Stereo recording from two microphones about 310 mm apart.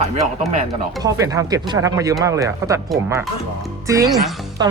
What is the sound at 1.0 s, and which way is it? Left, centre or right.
A man's voice, centre.